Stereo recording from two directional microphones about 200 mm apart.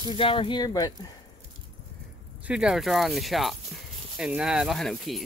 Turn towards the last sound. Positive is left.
turn(degrees=0)  # may be behind; listen again after turning